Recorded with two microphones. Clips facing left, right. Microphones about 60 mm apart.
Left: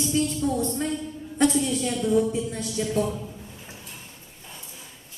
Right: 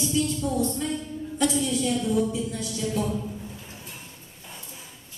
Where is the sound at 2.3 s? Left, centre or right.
Left.